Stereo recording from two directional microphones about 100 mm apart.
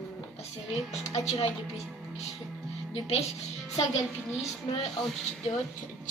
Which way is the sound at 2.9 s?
90° left.